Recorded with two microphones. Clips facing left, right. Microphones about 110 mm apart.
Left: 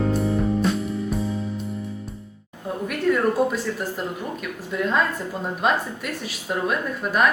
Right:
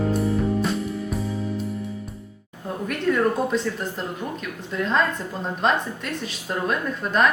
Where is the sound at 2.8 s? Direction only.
5° left (ahead or behind).